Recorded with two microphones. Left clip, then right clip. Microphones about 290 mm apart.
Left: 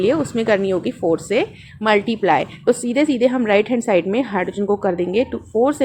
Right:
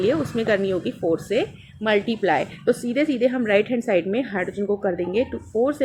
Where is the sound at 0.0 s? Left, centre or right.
Left.